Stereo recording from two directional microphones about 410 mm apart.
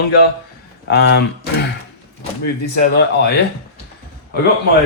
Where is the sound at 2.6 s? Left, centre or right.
Left.